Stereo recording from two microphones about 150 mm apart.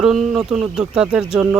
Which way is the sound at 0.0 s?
5° right (ahead or behind).